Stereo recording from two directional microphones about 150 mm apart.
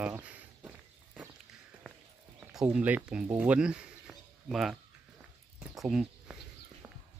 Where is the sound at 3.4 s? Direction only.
10° right (ahead or behind).